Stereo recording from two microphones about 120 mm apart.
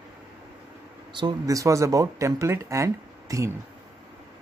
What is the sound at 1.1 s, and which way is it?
Speech, 35° right (ahead or behind).